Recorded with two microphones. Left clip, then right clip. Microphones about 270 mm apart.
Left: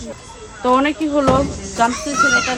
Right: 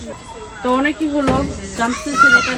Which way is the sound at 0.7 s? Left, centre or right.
Left.